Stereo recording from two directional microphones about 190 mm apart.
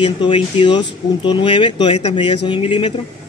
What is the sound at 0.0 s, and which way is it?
Speech, 25° left (ahead or behind).